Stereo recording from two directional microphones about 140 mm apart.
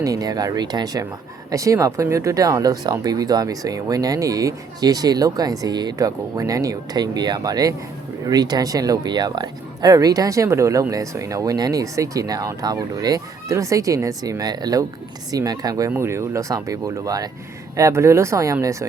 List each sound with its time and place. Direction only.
0.0 s speech: 25° right (ahead or behind)